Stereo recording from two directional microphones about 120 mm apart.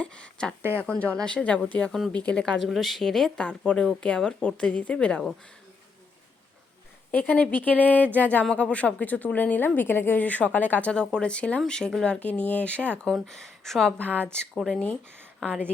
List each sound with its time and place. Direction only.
0.0 s speech: 10° left (ahead or behind)
7.1 s speech: 15° left (ahead or behind)
14.1 s speech: 15° right (ahead or behind)
14.3 s speech: 5° left (ahead or behind)